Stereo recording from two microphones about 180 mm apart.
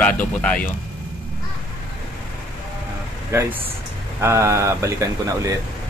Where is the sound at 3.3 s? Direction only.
15° right (ahead or behind).